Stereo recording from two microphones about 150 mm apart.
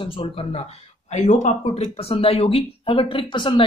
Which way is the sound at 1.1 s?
50° left (ahead or behind).